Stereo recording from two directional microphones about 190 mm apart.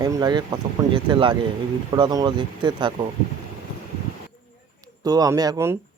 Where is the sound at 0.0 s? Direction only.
20° right (ahead or behind).